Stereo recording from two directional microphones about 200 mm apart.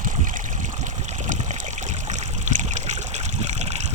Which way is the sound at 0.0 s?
40° right (ahead or behind).